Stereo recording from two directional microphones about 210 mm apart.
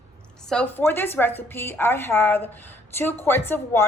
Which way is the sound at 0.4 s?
5° left (ahead or behind).